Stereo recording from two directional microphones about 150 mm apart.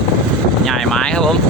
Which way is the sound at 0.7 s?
Centre (ahead or behind).